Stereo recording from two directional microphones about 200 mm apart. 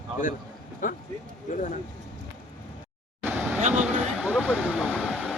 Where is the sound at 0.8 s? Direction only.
45° left (ahead or behind).